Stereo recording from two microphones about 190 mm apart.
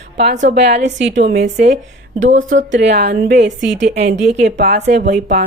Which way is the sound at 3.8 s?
35° right (ahead or behind).